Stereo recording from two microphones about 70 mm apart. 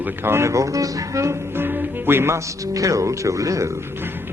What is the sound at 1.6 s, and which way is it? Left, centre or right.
Music, right.